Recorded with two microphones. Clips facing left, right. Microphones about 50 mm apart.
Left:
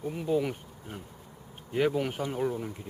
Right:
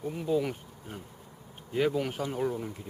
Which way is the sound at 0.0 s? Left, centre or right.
Centre.